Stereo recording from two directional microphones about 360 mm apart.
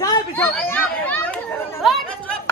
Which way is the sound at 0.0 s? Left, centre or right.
Centre.